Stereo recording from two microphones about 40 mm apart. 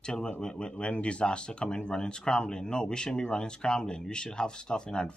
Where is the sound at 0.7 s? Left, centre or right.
Left.